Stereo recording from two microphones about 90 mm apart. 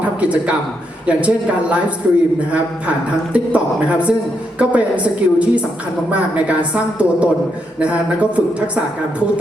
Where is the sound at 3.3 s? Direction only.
15° right (ahead or behind).